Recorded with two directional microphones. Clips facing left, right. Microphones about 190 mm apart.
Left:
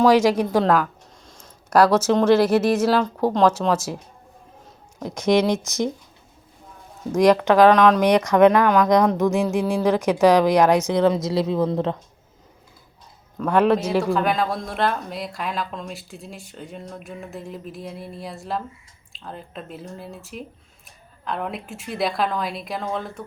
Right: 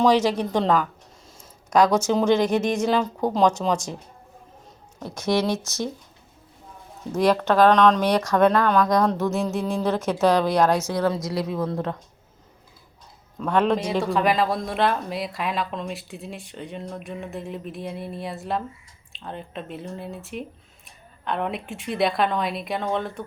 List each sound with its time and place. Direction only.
0.0 s speech: 10° left (ahead or behind)
4.9 s speech: 15° left (ahead or behind)
7.4 s speech: 15° left (ahead or behind)
13.4 s speech: 5° left (ahead or behind)